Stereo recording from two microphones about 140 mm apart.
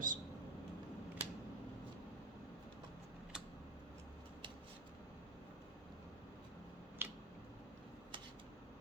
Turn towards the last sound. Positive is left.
turn(degrees=-15)  # may be behind; listen again after turning